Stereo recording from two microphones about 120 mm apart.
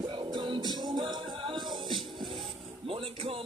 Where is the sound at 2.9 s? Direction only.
50° right (ahead or behind).